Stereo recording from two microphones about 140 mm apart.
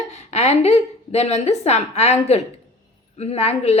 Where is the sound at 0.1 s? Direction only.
50° left (ahead or behind).